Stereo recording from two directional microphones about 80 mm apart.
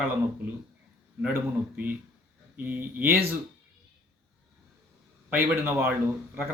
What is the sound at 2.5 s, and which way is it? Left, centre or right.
Speech, right.